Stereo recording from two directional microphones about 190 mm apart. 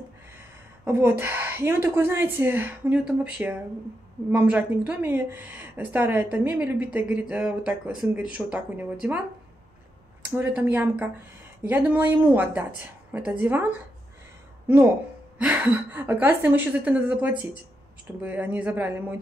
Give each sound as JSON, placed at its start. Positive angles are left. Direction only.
{"t": 0.8, "sound": "a woman's voice", "side_deg": -10}
{"t": 10.3, "sound": "a woman's voice", "side_deg": -10}
{"t": 15.3, "sound": "a woman's voice", "side_deg": -5}